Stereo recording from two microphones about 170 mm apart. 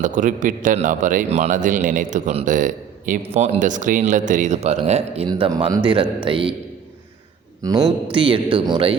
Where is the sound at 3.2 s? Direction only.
35° right (ahead or behind).